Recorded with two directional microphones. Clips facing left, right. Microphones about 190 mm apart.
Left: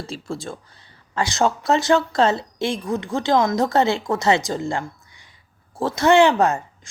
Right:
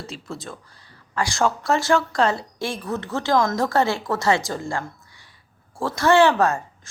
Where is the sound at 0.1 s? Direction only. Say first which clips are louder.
Left 4 dB; 30° left (ahead or behind).